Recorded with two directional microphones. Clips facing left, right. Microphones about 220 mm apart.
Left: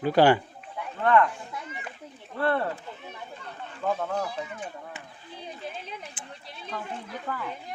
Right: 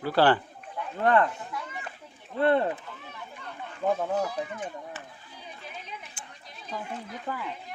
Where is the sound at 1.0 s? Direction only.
35° right (ahead or behind).